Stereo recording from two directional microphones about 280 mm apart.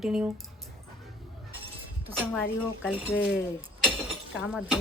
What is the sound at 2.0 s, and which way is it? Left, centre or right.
Speech, centre.